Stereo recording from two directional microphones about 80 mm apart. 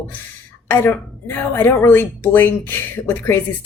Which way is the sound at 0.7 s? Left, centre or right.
Left.